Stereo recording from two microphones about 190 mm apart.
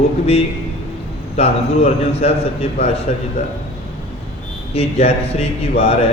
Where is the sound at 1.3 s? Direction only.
35° left (ahead or behind).